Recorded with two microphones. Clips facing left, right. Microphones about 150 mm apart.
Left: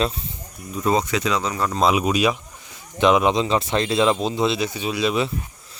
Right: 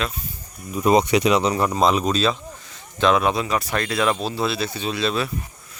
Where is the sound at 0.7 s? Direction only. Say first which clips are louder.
Right 4 dB; 15° right (ahead or behind).